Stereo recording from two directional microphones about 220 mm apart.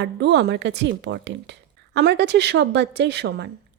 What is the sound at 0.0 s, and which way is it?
A woman's voice, 50° right (ahead or behind).